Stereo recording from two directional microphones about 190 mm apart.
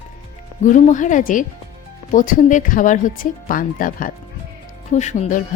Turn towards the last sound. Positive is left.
turn(degrees=40)  # may be behind; listen again after turning